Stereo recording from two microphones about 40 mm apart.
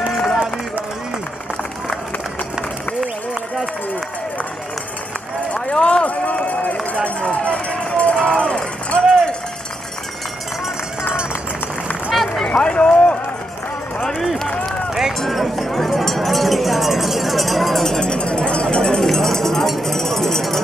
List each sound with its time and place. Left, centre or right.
0.1 s run: centre
5.5 s run: left
7.2 s run: left
12.1 s a sound: centre
12.4 s run: left
15.1 s cowbell: centre
17.9 s a sound: centre
19.0 s cowbell: centre
19.8 s a sound: centre